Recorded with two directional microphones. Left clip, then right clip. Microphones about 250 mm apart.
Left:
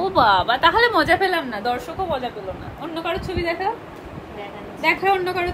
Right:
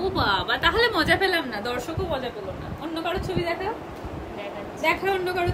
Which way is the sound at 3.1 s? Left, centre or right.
Left.